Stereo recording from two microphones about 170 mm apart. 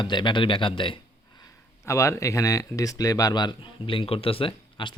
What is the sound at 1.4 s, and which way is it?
Speech, 20° left (ahead or behind).